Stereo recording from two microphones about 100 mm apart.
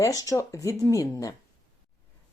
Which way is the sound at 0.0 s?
35° left (ahead or behind).